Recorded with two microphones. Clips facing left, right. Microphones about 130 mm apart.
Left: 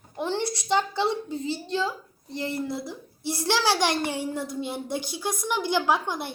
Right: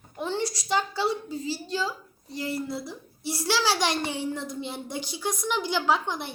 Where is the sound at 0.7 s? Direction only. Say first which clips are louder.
Left 2 dB; 20° left (ahead or behind).